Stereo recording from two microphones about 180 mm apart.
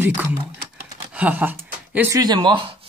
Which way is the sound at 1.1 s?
10° right (ahead or behind).